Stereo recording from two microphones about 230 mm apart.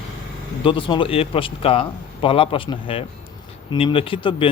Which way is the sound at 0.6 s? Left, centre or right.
Left.